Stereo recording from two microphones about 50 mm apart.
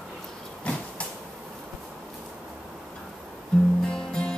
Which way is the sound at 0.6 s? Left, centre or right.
Left.